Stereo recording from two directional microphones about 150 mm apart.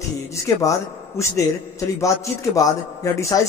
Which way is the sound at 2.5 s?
20° left (ahead or behind).